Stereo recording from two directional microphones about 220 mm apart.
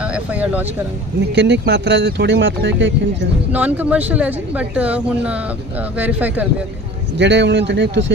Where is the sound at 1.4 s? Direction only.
50° right (ahead or behind).